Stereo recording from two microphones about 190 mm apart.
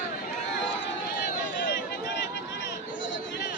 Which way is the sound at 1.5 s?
65° left (ahead or behind).